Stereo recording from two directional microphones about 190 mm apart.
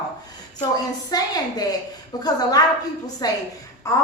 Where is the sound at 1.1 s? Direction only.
20° left (ahead or behind).